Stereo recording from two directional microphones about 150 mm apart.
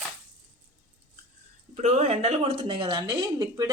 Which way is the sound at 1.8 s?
50° right (ahead or behind).